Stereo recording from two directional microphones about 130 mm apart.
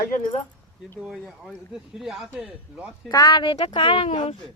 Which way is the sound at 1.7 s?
5° right (ahead or behind).